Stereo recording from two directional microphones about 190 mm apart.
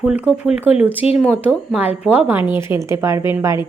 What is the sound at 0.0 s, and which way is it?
A woman's voice, 5° right (ahead or behind).